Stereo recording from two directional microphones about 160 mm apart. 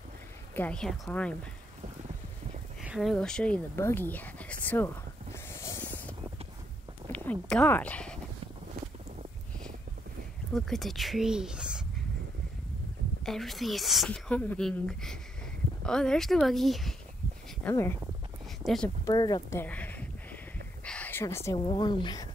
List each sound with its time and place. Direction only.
0.6 s speech: 5° left (ahead or behind)
2.8 s a woman's voice: centre (ahead or behind)
5.3 s a sound: 15° left (ahead or behind)
7.1 s speech: 10° left (ahead or behind)
10.5 s a woman's voice: centre (ahead or behind)
13.2 s a woman's voice: centre (ahead or behind)
17.6 s speech: 15° left (ahead or behind)
18.6 s speech: centre (ahead or behind)
19.0 s a woman's voice: 25° left (ahead or behind)
19.6 s a sound: 10° left (ahead or behind)
21.6 s a woman's voice: 30° left (ahead or behind)